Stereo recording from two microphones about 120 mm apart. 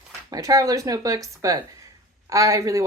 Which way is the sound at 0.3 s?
30° right (ahead or behind).